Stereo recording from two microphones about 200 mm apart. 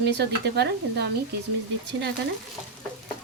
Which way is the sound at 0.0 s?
60° right (ahead or behind).